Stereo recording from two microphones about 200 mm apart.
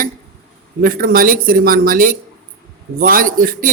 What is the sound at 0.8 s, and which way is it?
Speech, 45° right (ahead or behind).